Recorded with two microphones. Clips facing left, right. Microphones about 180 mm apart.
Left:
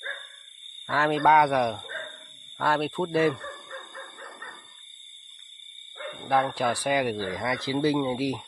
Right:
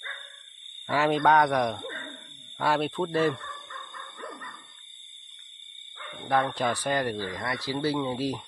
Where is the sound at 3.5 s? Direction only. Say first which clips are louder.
Left 4 dB; 40° left (ahead or behind).